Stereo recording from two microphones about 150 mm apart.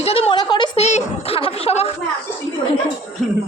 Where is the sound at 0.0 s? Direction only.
40° left (ahead or behind).